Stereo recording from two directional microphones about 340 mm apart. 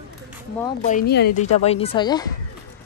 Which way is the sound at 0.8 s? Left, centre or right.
Left.